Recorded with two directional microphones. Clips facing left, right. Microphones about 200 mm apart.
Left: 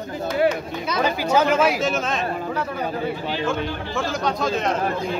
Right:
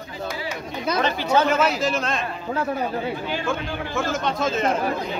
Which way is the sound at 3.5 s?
Centre (ahead or behind).